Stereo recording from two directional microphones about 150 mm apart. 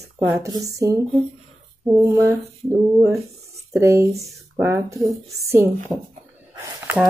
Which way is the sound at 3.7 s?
20° right (ahead or behind).